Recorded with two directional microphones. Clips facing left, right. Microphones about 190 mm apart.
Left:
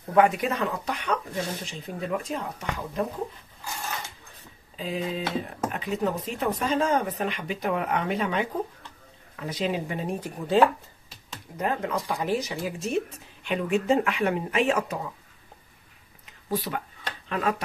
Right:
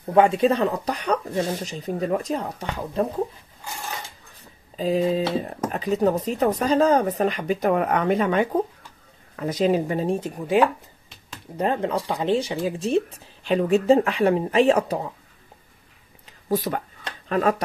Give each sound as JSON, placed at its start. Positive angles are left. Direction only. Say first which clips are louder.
{"t": 0.1, "sound": "speech", "louder": "right 4 dB", "side_deg": -25}
{"t": 4.7, "sound": "speech", "louder": "right 9 dB", "side_deg": -40}
{"t": 10.3, "sound": "speech", "louder": "even", "side_deg": -10}
{"t": 11.5, "sound": "speech", "louder": "right 5 dB", "side_deg": -30}
{"t": 16.4, "sound": "speech", "louder": "right 5 dB", "side_deg": -45}